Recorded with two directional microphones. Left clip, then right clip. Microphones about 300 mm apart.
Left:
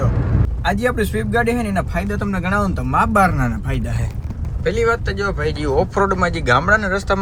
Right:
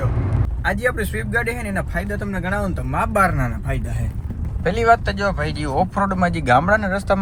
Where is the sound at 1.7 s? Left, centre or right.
Centre.